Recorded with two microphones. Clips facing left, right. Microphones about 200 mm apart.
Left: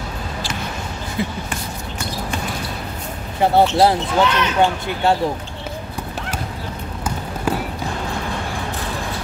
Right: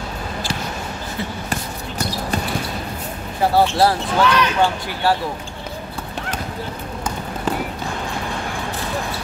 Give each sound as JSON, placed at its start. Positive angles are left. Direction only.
{"t": 1.5, "sound": "basketball bounce", "side_deg": -40}
{"t": 3.5, "sound": "speech", "side_deg": 20}
{"t": 7.5, "sound": "a sound", "side_deg": 10}